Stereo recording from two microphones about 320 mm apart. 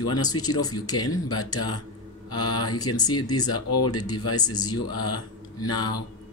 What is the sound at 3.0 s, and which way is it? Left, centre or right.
Speech, centre.